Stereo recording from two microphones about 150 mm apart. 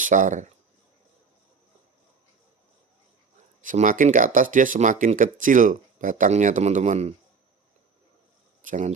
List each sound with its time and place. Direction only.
0.0 s speech: 60° right (ahead or behind)
3.6 s speech: 60° right (ahead or behind)
8.6 s speech: 55° right (ahead or behind)